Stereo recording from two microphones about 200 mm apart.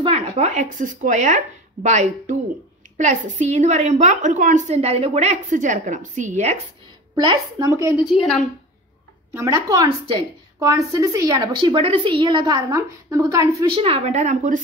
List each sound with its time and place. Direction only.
0.0 s a woman's voice: 30° right (ahead or behind)
7.2 s a woman's voice: 20° right (ahead or behind)
8.1 s a woman's voice: centre (ahead or behind)
9.3 s speech: 15° right (ahead or behind); by 14.6 s 40° right (ahead or behind)